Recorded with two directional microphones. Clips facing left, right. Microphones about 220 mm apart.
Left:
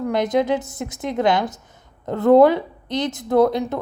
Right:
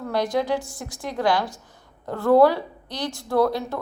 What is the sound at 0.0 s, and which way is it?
A woman's voice, 20° left (ahead or behind).